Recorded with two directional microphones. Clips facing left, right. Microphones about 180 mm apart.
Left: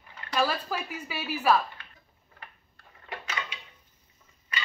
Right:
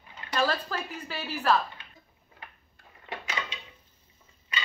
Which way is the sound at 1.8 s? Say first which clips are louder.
Even; 20° right (ahead or behind).